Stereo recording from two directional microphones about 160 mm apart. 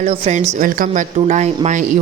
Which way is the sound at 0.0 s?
45° right (ahead or behind).